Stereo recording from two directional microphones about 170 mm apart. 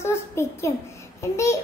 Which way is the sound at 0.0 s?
15° left (ahead or behind).